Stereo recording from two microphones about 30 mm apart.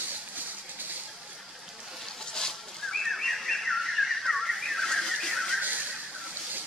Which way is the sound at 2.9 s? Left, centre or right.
Centre.